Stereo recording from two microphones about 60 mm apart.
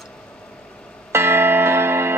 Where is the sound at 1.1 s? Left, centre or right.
Right.